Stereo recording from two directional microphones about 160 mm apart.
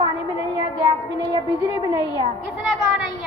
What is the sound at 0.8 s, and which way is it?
Speech, 25° right (ahead or behind).